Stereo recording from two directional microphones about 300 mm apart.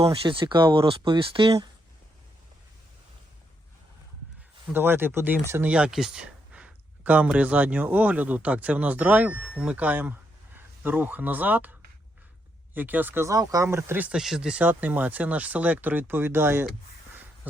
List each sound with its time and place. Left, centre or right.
0.0 s speech: centre
4.7 s speech: centre
12.7 s speech: centre